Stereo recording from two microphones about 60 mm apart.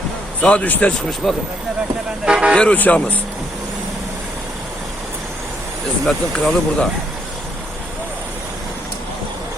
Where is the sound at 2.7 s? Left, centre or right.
Left.